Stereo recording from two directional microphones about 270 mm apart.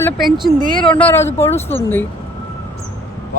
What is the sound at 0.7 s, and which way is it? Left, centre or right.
Speech, centre.